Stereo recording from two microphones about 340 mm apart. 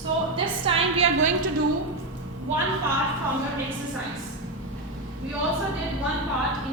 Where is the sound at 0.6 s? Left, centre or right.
Centre.